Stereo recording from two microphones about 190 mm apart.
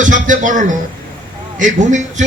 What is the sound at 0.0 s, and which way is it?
A man's voice, 40° right (ahead or behind).